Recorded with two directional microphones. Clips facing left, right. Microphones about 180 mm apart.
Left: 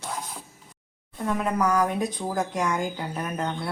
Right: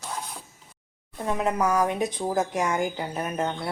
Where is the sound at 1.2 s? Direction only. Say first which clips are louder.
Even; 20° right (ahead or behind).